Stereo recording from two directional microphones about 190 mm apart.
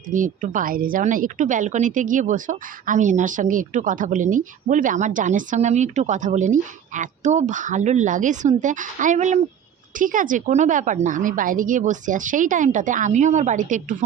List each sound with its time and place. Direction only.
0.1 s a woman's voice: 45° right (ahead or behind)